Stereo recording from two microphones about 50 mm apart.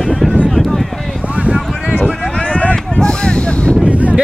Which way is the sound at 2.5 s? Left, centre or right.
Left.